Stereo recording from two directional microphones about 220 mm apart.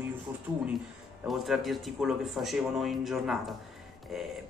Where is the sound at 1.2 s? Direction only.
Centre (ahead or behind).